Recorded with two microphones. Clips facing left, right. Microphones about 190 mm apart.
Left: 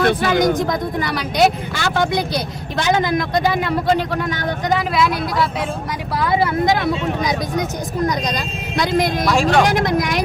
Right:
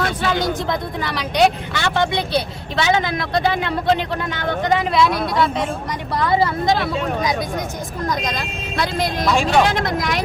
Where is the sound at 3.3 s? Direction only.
10° left (ahead or behind).